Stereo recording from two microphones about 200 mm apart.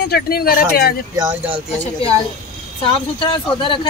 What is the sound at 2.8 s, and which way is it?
Speech, 25° left (ahead or behind).